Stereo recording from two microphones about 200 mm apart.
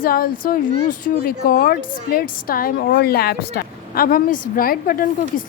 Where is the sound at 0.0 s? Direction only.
45° left (ahead or behind).